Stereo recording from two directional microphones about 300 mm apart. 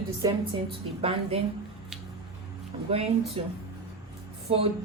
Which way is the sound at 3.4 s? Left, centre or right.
Centre.